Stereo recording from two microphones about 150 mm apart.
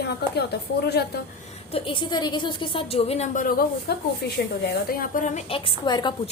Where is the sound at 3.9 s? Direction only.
90° left.